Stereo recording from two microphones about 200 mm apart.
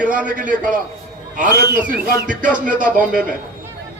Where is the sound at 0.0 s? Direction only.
5° right (ahead or behind).